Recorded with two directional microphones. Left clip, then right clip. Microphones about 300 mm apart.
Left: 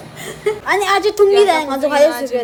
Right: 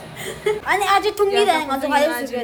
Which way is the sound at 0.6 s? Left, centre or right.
Left.